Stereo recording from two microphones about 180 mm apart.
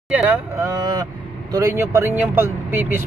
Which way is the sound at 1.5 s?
15° right (ahead or behind).